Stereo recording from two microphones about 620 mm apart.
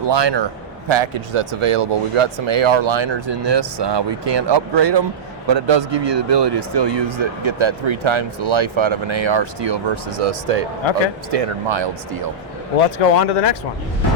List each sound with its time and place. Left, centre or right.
0.0 s a man's voice: right
12.7 s speech: left